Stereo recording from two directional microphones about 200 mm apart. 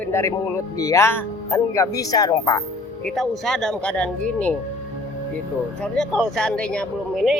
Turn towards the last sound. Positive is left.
turn(degrees=0)  # may be behind; listen again after turning